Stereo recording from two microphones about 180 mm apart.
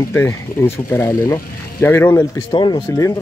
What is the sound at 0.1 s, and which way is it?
Speech, 15° left (ahead or behind).